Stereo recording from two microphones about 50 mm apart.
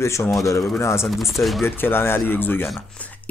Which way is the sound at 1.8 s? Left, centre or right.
Left.